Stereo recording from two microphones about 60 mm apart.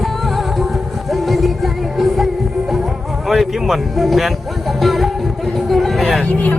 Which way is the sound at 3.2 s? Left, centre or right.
Centre.